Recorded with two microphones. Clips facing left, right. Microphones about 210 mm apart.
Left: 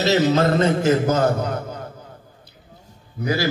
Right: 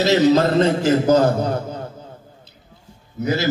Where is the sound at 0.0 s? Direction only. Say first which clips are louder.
Right 3 dB; 35° right (ahead or behind).